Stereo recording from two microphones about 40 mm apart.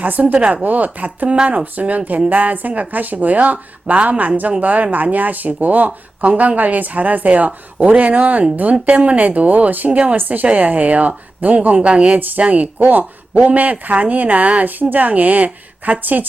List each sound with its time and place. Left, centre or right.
0.0 s speech: right
0.3 s speech: right
0.6 s speech: right
1.8 s speech: right